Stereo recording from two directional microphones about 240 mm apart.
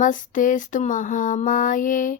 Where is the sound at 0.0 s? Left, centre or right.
Left.